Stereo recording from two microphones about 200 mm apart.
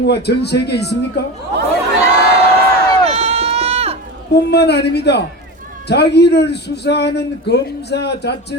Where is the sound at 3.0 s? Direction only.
30° right (ahead or behind).